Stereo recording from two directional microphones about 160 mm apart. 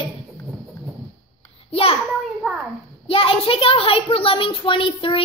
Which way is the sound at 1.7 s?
40° left (ahead or behind).